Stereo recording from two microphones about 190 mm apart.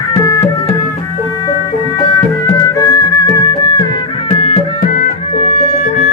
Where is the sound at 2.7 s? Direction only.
20° left (ahead or behind).